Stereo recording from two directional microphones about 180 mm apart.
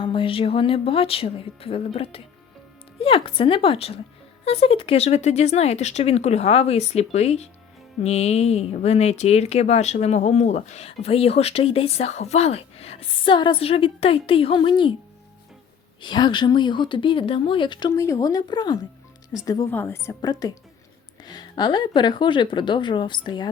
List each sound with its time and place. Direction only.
0.0 s speech: 30° left (ahead or behind)
16.0 s a woman's voice: 25° left (ahead or behind)